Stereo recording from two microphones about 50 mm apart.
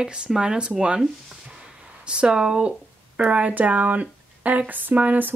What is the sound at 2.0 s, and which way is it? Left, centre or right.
Speech, centre.